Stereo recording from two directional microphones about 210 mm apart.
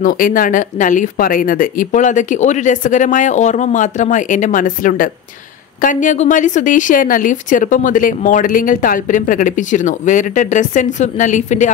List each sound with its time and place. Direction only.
0.0 s speech: 40° left (ahead or behind)